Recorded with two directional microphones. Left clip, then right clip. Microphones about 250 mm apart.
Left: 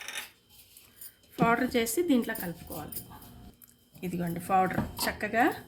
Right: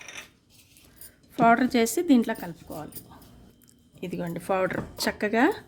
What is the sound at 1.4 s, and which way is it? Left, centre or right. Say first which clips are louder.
A woman's voice: right 6 dB; right.